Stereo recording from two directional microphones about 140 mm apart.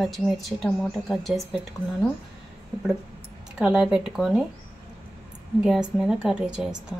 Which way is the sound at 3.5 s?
5° right (ahead or behind).